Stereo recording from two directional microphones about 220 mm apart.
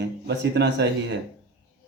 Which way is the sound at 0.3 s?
50° right (ahead or behind).